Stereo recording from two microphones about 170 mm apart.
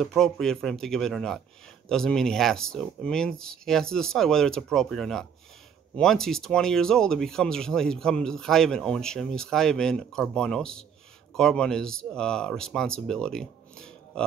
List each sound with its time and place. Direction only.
0.0 s speech: 5° left (ahead or behind)